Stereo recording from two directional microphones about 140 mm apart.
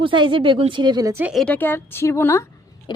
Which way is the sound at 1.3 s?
Centre (ahead or behind).